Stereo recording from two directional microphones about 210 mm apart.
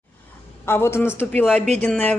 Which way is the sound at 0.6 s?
10° left (ahead or behind).